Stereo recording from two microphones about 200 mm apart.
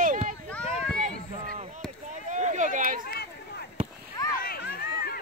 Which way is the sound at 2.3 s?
35° right (ahead or behind).